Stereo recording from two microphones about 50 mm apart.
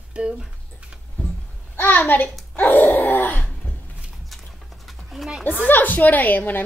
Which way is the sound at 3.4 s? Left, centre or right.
Left.